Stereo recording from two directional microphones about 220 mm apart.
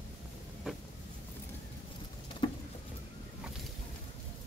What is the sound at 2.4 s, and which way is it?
Patter, 20° left (ahead or behind).